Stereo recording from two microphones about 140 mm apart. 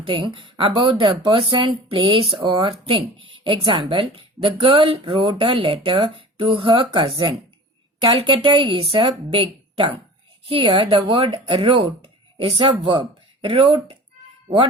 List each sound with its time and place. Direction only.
0.0 s a woman's voice: 40° right (ahead or behind)